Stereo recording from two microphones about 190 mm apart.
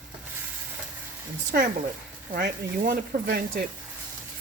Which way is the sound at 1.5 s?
55° right (ahead or behind).